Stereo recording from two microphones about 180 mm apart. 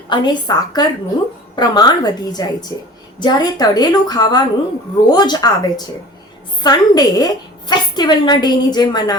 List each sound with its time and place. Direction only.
0.1 s a woman's voice: 25° left (ahead or behind)